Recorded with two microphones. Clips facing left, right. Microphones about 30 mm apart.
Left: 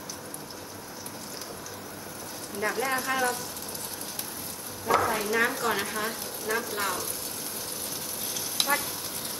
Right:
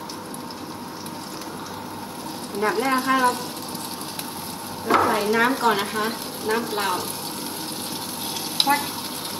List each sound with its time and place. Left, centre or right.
2.6 s speech: right
4.8 s speech: right
8.5 s frying: right